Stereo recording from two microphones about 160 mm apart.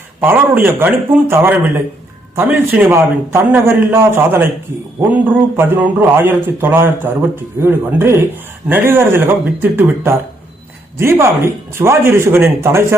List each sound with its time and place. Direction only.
0.2 s a man's voice: 10° right (ahead or behind)
5.5 s a man's voice: 10° right (ahead or behind)